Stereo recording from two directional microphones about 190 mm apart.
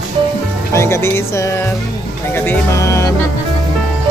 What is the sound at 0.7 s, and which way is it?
Speech, 15° left (ahead or behind).